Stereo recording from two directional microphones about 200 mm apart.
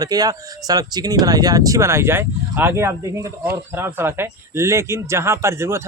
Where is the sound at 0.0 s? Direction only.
20° right (ahead or behind).